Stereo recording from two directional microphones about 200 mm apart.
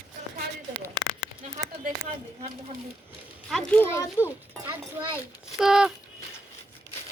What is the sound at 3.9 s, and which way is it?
Speech, 15° left (ahead or behind).